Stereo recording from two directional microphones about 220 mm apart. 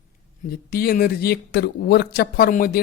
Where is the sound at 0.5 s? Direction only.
45° left (ahead or behind).